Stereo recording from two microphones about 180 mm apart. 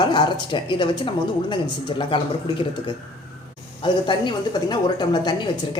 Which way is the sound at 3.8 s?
25° left (ahead or behind).